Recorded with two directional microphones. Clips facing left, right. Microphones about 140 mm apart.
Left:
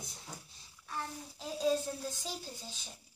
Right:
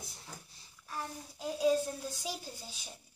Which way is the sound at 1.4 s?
10° right (ahead or behind).